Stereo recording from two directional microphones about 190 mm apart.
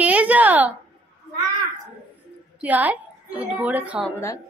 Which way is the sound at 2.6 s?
10° right (ahead or behind).